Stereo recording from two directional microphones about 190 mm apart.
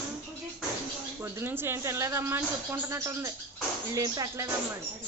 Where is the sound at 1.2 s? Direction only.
10° right (ahead or behind).